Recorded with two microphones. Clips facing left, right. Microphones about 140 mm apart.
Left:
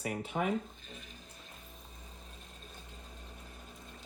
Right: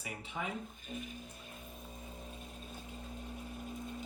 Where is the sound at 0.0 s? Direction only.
55° left (ahead or behind).